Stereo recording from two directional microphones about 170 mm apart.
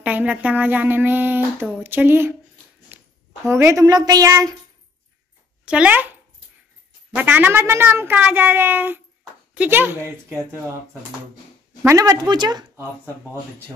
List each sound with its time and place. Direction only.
0.0 s speech: 10° right (ahead or behind)
2.9 s a sound: 10° right (ahead or behind)
3.4 s a woman's voice: 15° right (ahead or behind)
5.7 s speech: 10° right (ahead or behind)
7.2 s speech: 10° right (ahead or behind)
11.8 s a woman's voice: 20° right (ahead or behind)